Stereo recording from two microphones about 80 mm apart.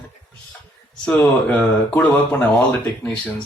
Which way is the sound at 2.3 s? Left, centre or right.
Left.